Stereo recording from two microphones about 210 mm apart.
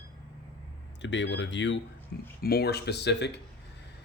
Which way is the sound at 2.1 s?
50° left (ahead or behind).